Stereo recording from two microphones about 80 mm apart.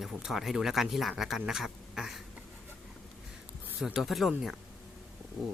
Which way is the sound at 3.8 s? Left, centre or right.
Centre.